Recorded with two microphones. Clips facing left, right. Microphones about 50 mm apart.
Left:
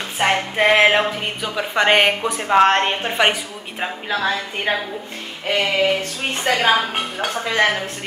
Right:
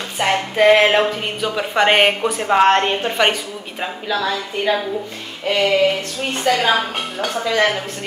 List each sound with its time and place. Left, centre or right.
0.2 s a woman's voice: centre
2.7 s a woman's voice: centre
4.1 s a woman's voice: left
5.5 s a woman's voice: centre
6.5 s a woman's voice: left
7.2 s a woman's voice: centre